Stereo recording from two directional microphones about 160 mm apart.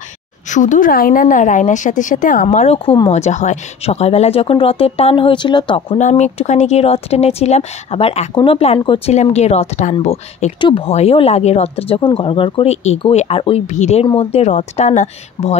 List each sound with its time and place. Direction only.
0.5 s a woman's voice: 50° left (ahead or behind); by 5.9 s 30° left (ahead or behind)
5.9 s a woman's voice: 45° left (ahead or behind)
9.1 s a woman's voice: 45° left (ahead or behind)